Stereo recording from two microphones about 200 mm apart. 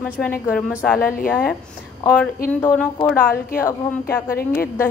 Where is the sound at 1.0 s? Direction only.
45° left (ahead or behind).